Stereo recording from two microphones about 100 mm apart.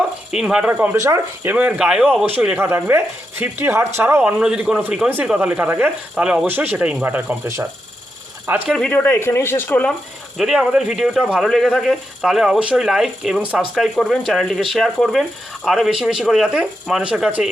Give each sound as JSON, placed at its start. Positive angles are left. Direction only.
{"t": 0.3, "sound": "speech", "side_deg": -5}
{"t": 0.9, "sound": "speech", "side_deg": -35}
{"t": 1.5, "sound": "speech", "side_deg": -15}
{"t": 2.6, "sound": "speech", "side_deg": -25}
{"t": 4.2, "sound": "speech", "side_deg": -5}
{"t": 8.9, "sound": "a man's voice", "side_deg": 20}
{"t": 10.3, "sound": "speech", "side_deg": -5}
{"t": 13.7, "sound": "speech", "side_deg": 0}